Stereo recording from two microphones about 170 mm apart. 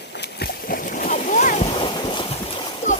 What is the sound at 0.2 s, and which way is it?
Splash, 70° left (ahead or behind).